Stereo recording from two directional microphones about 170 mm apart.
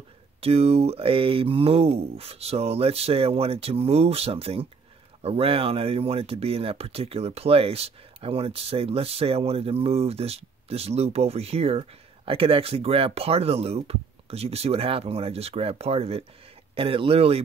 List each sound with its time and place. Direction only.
0.4 s speech: 35° right (ahead or behind)